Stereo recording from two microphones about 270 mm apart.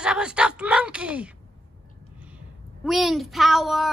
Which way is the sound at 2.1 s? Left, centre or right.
Centre.